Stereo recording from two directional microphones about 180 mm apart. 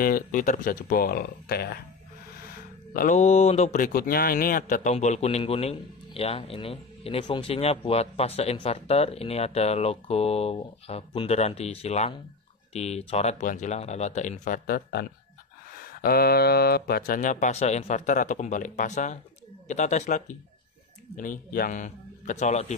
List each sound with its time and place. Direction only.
0.0 s speech: 50° left (ahead or behind)
2.9 s speech: 50° left (ahead or behind)